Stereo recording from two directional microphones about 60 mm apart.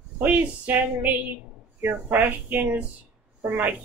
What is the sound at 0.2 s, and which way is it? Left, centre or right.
Speech, right.